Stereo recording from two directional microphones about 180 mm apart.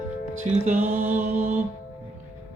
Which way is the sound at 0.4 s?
40° right (ahead or behind).